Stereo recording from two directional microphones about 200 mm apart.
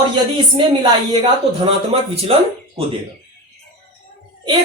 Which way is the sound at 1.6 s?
30° right (ahead or behind).